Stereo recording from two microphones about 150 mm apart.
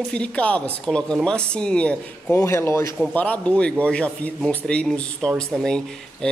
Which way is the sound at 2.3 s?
20° left (ahead or behind).